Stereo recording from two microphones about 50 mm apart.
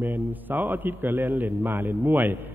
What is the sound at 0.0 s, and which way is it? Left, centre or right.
A man's voice, right.